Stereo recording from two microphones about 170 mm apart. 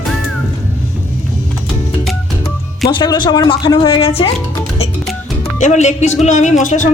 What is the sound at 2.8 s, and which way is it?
Speech, 25° left (ahead or behind).